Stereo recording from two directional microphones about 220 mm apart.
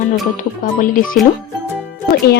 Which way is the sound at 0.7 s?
40° left (ahead or behind).